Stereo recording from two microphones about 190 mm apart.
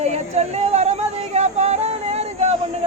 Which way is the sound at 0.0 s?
35° right (ahead or behind).